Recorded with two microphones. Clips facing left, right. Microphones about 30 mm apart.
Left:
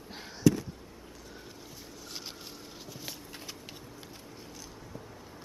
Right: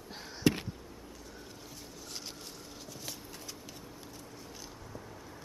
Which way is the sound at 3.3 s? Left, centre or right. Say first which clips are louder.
Left 2 dB; left.